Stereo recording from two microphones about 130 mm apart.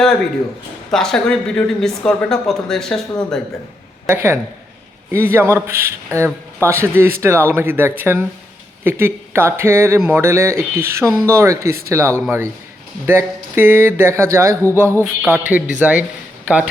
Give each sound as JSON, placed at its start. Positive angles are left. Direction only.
{"t": 0.9, "sound": "speech", "side_deg": 5}
{"t": 4.0, "sound": "a woman's voice", "side_deg": -20}